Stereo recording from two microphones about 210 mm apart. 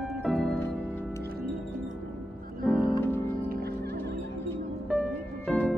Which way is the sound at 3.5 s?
45° right (ahead or behind).